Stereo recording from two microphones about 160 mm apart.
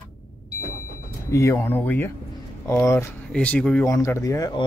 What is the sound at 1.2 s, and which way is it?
Speech, 15° left (ahead or behind).